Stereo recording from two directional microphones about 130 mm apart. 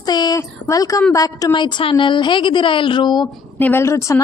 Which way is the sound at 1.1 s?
25° left (ahead or behind).